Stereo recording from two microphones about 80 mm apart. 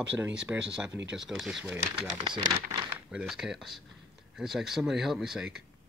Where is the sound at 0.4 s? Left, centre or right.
Centre.